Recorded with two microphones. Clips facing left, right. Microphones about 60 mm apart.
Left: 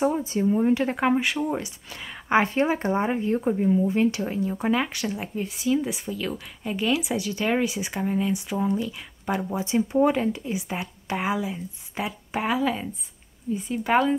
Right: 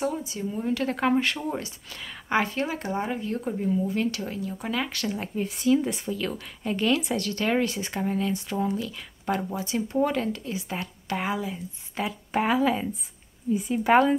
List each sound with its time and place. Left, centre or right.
0.0 s speech: left; by 9.6 s centre
9.6 s speech: centre